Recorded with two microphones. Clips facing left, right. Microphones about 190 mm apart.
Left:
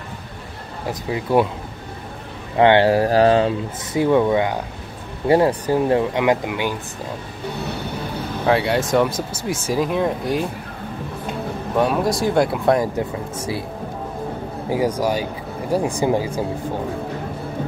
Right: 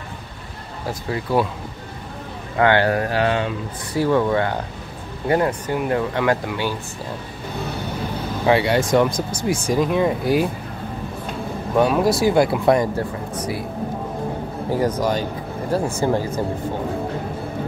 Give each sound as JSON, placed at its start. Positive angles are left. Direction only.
{"t": 1.1, "sound": "speech", "side_deg": 20}
{"t": 2.5, "sound": "speech", "side_deg": 25}
{"t": 3.9, "sound": "speech", "side_deg": 20}
{"t": 5.3, "sound": "speech", "side_deg": 30}
{"t": 8.5, "sound": "speech", "side_deg": 0}
{"t": 11.7, "sound": "speech", "side_deg": 0}
{"t": 12.9, "sound": "speech", "side_deg": 25}
{"t": 14.7, "sound": "speech", "side_deg": 10}